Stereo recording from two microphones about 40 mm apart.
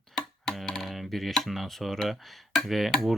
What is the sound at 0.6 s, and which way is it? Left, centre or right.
Speech, centre.